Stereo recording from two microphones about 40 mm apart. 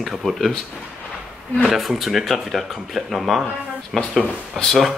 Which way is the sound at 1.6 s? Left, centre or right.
Centre.